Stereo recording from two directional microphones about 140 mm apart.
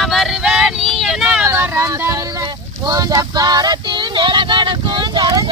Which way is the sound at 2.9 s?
25° right (ahead or behind).